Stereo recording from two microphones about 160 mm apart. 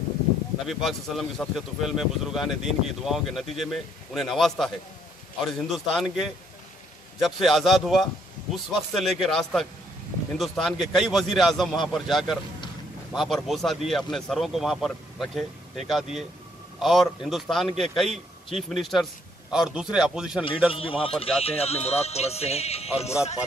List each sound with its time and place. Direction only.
0.7 s speech: centre (ahead or behind)
20.7 s speech: 35° left (ahead or behind)